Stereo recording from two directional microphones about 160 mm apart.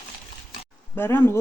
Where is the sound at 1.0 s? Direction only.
15° left (ahead or behind).